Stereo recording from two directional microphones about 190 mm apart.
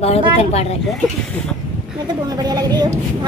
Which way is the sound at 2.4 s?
20° right (ahead or behind).